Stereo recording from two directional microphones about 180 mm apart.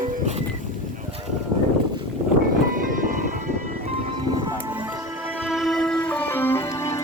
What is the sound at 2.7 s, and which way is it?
Music, 50° right (ahead or behind).